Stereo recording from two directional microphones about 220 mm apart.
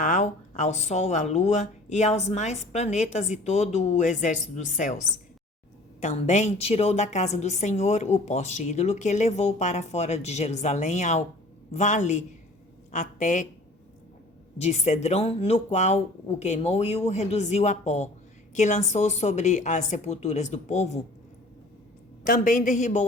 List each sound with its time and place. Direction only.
0.0 s a woman's voice: 35° left (ahead or behind)
14.6 s a woman's voice: 30° left (ahead or behind)
22.2 s a woman's voice: 35° left (ahead or behind)